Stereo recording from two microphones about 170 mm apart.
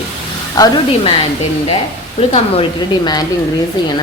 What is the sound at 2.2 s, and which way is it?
A woman's voice, 35° left (ahead or behind).